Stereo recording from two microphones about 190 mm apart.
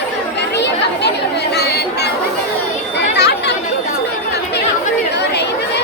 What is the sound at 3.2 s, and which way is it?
Chatter, 60° left (ahead or behind).